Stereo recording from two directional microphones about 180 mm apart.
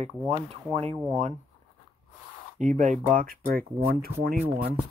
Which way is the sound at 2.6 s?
40° right (ahead or behind).